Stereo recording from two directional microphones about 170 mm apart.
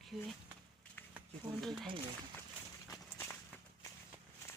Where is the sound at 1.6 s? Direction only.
Centre (ahead or behind).